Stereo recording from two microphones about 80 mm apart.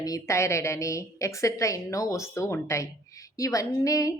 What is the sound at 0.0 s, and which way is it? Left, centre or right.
A woman's voice, left.